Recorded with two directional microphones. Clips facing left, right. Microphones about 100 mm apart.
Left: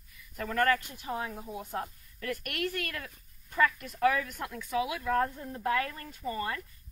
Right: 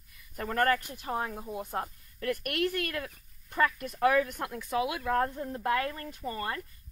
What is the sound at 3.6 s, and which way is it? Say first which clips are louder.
Speech: even; 35° right (ahead or behind).